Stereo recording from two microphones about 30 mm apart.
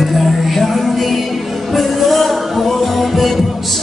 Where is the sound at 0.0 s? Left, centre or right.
Centre.